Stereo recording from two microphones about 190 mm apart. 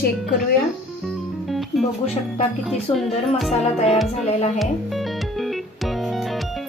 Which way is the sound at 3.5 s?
35° left (ahead or behind).